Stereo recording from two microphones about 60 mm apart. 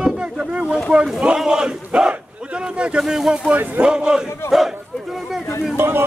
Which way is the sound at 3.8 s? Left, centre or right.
Centre.